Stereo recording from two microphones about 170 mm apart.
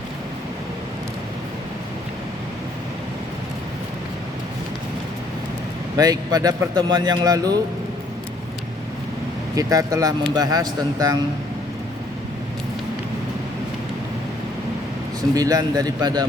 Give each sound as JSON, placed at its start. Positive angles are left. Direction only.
{"t": 6.0, "sound": "speech", "side_deg": -20}
{"t": 9.6, "sound": "speech", "side_deg": -20}
{"t": 15.4, "sound": "speech", "side_deg": -20}